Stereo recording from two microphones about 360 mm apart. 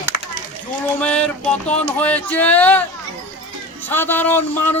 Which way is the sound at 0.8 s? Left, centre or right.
Centre.